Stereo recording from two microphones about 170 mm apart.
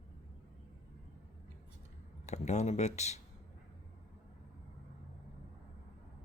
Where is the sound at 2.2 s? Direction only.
45° left (ahead or behind).